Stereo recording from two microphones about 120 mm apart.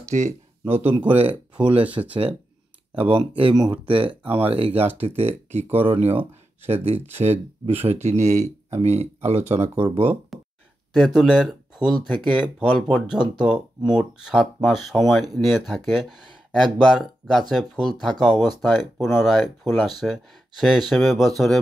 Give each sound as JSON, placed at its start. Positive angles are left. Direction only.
{"t": 0.1, "sound": "speech", "side_deg": -65}
{"t": 3.0, "sound": "speech", "side_deg": -50}
{"t": 3.5, "sound": "speech", "side_deg": -40}
{"t": 9.8, "sound": "speech", "side_deg": -50}
{"t": 10.9, "sound": "speech", "side_deg": 0}